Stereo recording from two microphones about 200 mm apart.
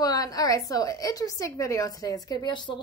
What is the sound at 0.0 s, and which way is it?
A woman's voice, 20° left (ahead or behind).